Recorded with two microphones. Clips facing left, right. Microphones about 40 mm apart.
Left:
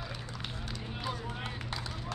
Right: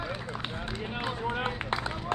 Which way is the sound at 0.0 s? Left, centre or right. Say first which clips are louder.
Right 7 dB; right.